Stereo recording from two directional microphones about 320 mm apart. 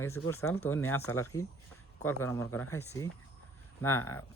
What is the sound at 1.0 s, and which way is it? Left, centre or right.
Speech, left.